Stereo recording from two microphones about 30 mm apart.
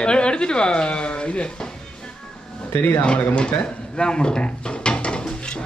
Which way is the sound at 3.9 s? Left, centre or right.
Left.